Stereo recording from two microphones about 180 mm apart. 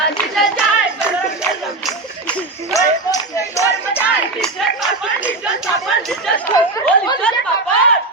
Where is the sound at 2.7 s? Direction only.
20° left (ahead or behind).